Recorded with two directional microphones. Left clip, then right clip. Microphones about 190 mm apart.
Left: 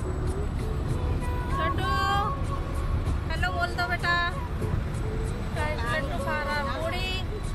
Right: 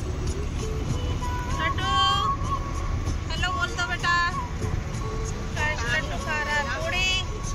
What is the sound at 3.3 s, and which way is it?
Vehicle, 30° left (ahead or behind).